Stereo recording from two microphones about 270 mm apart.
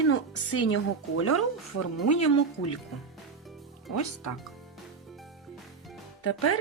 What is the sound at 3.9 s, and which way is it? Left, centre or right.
Speech, left.